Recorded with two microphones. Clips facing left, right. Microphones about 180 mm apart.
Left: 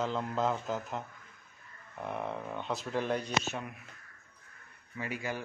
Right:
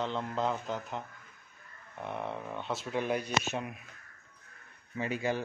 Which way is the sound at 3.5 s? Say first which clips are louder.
Right 2 dB; 20° right (ahead or behind).